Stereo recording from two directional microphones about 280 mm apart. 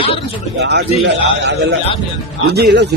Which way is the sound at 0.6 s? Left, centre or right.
Right.